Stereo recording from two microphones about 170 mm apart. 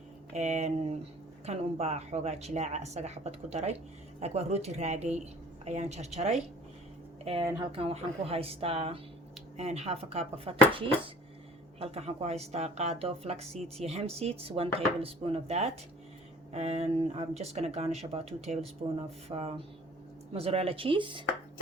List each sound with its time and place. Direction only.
0.3 s a woman's voice: 40° right (ahead or behind)
7.7 s a woman's voice: 35° right (ahead or behind)